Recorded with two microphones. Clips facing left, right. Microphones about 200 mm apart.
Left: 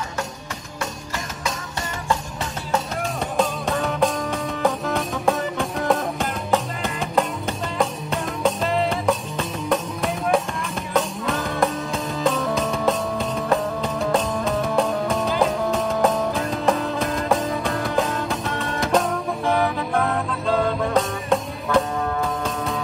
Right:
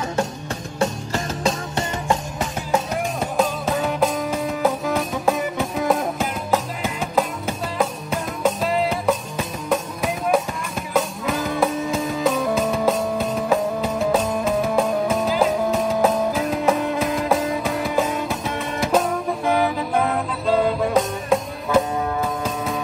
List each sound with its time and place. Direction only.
1.4 s music: 25° right (ahead or behind)
3.3 s music: 5° right (ahead or behind)